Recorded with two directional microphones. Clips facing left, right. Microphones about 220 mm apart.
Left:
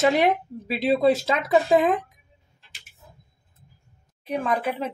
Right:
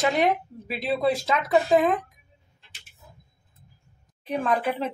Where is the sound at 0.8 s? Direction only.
25° left (ahead or behind).